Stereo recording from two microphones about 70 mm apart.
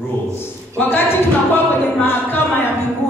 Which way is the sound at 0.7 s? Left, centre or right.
Left.